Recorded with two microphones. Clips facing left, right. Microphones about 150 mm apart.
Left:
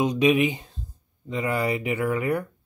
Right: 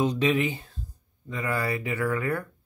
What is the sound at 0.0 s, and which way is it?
Speech, 15° left (ahead or behind).